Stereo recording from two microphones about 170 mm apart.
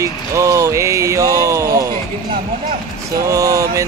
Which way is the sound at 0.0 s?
15° right (ahead or behind).